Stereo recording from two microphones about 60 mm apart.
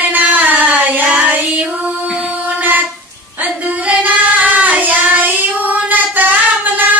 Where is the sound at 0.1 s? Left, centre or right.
Right.